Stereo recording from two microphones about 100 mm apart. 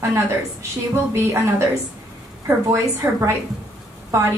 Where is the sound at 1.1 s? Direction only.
30° right (ahead or behind).